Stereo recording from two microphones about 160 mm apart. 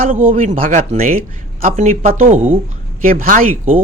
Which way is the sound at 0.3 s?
55° right (ahead or behind).